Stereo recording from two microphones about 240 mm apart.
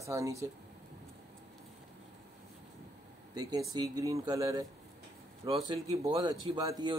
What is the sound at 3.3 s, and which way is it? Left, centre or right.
A man's voice, centre.